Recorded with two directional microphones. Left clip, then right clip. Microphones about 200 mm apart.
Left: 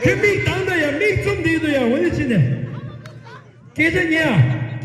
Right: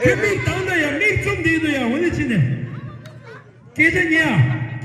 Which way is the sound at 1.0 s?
40° left (ahead or behind).